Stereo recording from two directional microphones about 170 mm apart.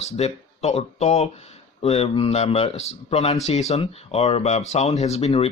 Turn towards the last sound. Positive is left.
turn(degrees=40)  # may be behind; listen again after turning